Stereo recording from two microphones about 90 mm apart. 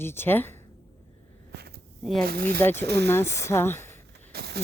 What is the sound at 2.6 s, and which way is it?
A woman's voice, 25° left (ahead or behind).